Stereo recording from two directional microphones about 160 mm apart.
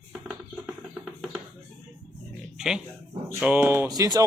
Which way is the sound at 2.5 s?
5° right (ahead or behind).